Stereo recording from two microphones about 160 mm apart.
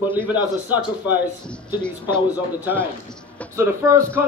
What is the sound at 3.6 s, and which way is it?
Speech, 15° right (ahead or behind).